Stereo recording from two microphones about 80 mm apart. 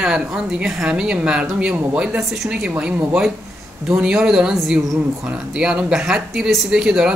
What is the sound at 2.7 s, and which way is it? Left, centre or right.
Speech, right.